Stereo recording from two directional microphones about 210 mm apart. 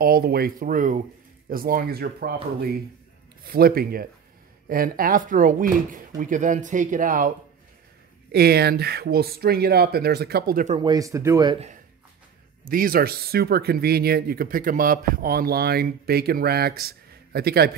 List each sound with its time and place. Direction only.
0.0 s speech: 45° right (ahead or behind)
10.8 s speech: 20° right (ahead or behind)
12.6 s speech: 45° right (ahead or behind)